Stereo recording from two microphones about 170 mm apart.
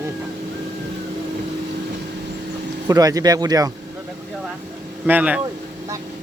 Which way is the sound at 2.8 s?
20° right (ahead or behind).